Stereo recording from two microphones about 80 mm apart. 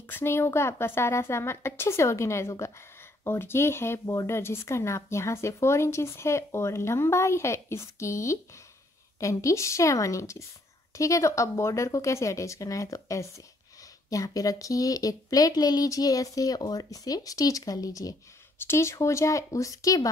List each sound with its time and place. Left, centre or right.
0.0 s a woman's voice: left
18.6 s speech: left